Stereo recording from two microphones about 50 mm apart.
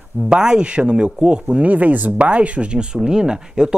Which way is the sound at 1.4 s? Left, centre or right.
Right.